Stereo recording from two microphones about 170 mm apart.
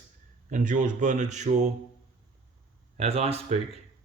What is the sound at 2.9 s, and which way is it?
Speech, 35° right (ahead or behind).